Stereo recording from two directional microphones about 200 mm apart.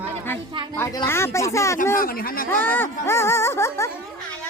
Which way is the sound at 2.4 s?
10° left (ahead or behind).